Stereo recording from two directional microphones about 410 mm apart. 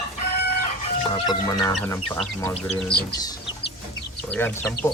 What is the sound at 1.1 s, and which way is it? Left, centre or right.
Speech, centre.